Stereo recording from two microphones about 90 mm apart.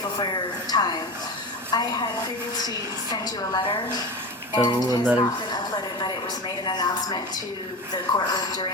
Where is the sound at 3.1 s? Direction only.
50° left (ahead or behind).